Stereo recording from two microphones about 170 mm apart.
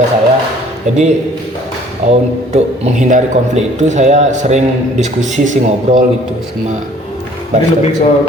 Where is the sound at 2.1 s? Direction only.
40° right (ahead or behind).